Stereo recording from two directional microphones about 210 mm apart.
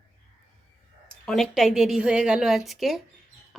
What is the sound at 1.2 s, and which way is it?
Speech, centre (ahead or behind).